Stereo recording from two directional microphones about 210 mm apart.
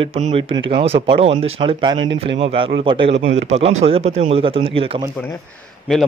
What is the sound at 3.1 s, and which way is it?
Speech, 60° right (ahead or behind).